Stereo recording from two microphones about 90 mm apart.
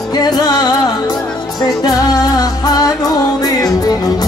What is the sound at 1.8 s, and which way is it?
Music, 45° left (ahead or behind).